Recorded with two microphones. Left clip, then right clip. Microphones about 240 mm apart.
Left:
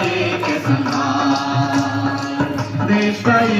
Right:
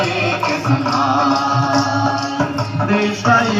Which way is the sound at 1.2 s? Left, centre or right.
Centre.